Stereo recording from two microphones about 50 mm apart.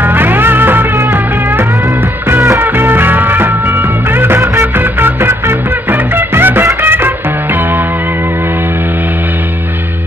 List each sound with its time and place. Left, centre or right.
0.0 s music: right